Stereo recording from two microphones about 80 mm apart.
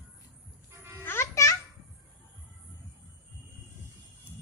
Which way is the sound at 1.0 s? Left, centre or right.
Left.